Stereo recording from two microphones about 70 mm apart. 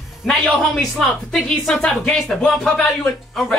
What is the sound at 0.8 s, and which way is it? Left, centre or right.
A woman's voice, centre.